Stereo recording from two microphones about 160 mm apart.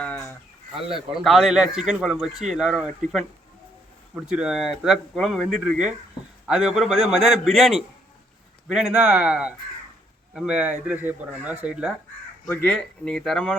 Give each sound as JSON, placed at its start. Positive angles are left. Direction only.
{"t": 0.0, "sound": "bird", "side_deg": 10}
{"t": 0.9, "sound": "speech", "side_deg": 0}
{"t": 12.5, "sound": "speech", "side_deg": 5}